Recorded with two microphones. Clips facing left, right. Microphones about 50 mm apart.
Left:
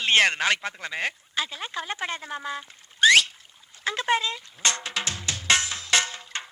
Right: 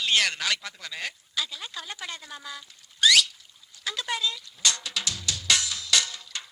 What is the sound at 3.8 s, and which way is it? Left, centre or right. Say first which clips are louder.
Drum: left 5 dB; left.